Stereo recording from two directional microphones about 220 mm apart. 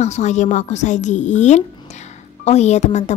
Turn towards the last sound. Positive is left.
turn(degrees=30)  # may be behind; listen again after turning